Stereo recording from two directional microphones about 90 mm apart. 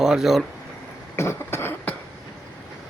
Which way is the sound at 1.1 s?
30° left (ahead or behind).